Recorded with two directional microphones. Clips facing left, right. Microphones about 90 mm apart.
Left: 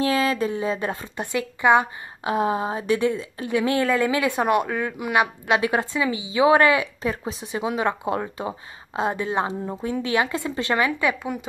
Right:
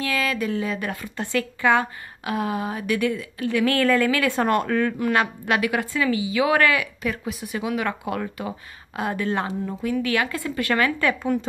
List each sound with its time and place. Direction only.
0.0 s a woman's voice: 30° left (ahead or behind); by 5.3 s 10° left (ahead or behind)
5.5 s a woman's voice: 30° left (ahead or behind); by 11.4 s 15° left (ahead or behind)